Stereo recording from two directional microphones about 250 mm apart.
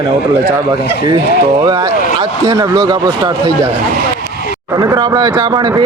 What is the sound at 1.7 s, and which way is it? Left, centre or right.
Speech, centre.